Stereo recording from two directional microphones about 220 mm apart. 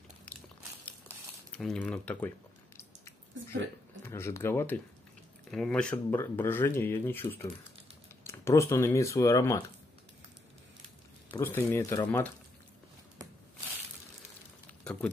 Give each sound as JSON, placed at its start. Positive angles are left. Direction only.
{"t": 1.5, "sound": "speech", "side_deg": 5}
{"t": 4.0, "sound": "speech", "side_deg": 10}
{"t": 11.3, "sound": "speech", "side_deg": 10}